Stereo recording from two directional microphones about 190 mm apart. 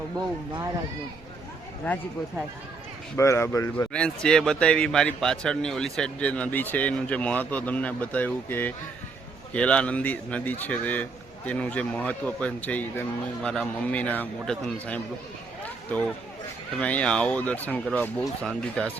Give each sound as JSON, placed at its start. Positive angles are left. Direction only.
{"t": 3.2, "sound": "a man's voice", "side_deg": 15}
{"t": 3.9, "sound": "a man's voice", "side_deg": 5}
{"t": 16.7, "sound": "a man's voice", "side_deg": 5}